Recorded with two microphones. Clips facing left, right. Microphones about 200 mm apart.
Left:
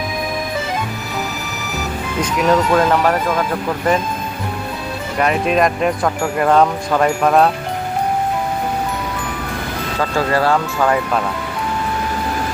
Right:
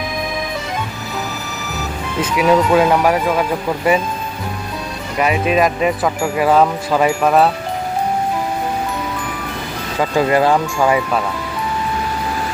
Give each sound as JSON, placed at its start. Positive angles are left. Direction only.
{"t": 2.2, "sound": "speech", "side_deg": -5}
{"t": 5.1, "sound": "speech", "side_deg": -5}
{"t": 10.0, "sound": "speech", "side_deg": -15}